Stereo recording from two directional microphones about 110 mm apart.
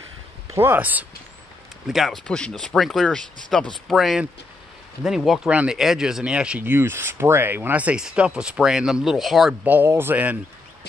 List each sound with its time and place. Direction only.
0.6 s speech: 15° right (ahead or behind)
1.9 s speech: centre (ahead or behind)
9.5 s speech: 15° right (ahead or behind)